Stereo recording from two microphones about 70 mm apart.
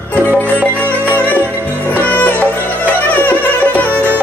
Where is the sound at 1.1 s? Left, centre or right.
Left.